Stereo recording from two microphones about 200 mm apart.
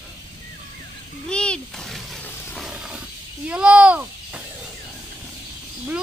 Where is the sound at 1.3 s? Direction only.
5° left (ahead or behind).